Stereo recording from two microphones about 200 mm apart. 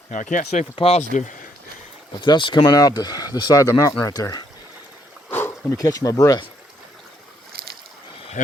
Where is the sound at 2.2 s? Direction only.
20° left (ahead or behind).